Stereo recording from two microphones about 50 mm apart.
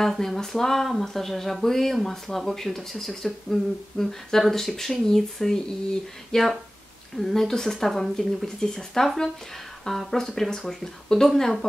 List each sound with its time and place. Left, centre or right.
0.0 s speech: centre